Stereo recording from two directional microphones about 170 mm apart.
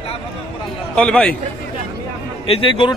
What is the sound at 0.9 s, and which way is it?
Speech, 5° left (ahead or behind).